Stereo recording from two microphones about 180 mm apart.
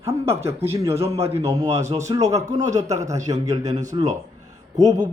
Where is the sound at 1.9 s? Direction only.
15° right (ahead or behind).